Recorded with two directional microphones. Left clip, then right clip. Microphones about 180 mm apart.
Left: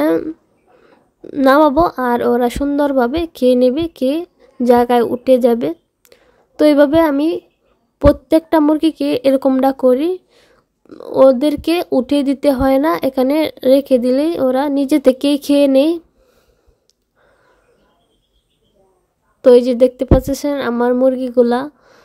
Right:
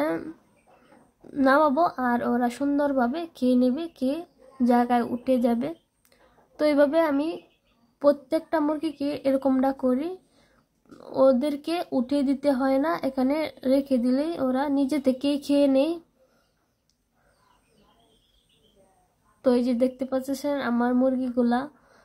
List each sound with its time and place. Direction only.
0.0 s a sound: 45° left (ahead or behind)
1.2 s a woman's voice: 45° left (ahead or behind)
19.4 s a woman's voice: 45° left (ahead or behind)